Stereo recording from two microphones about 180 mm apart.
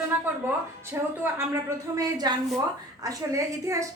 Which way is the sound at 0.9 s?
15° right (ahead or behind).